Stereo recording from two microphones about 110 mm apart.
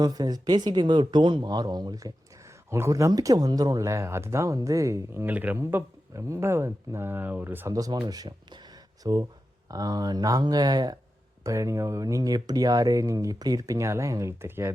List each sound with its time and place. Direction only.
0.0 s speech: 35° right (ahead or behind)
2.6 s speech: 25° right (ahead or behind)
7.7 s speech: 35° right (ahead or behind)